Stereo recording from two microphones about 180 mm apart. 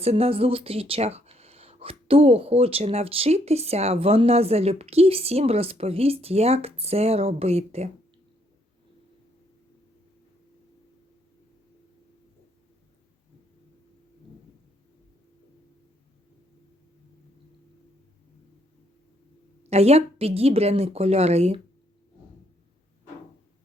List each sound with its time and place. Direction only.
0.0 s speech: 35° right (ahead or behind)
19.7 s speech: 35° right (ahead or behind)